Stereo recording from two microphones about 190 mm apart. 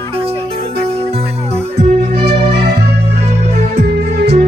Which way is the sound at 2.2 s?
60° right (ahead or behind).